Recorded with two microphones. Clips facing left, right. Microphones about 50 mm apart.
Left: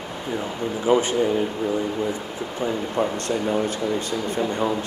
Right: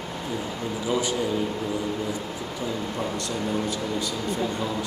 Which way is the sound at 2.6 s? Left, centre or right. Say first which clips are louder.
Left 6 dB; left.